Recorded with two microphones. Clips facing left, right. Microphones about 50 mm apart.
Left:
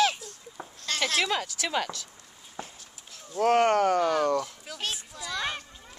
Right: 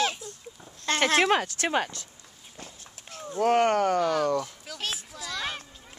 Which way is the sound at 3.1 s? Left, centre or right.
Right.